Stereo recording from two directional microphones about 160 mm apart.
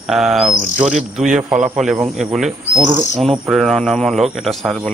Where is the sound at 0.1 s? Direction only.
Centre (ahead or behind).